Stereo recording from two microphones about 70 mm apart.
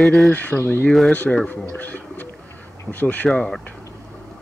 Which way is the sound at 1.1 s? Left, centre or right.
Centre.